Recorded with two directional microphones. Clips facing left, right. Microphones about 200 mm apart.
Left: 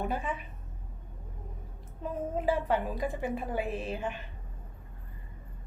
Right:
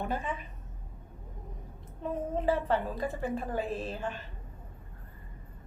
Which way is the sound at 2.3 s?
10° left (ahead or behind).